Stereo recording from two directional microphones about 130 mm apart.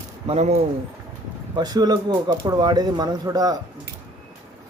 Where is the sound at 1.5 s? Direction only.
30° right (ahead or behind).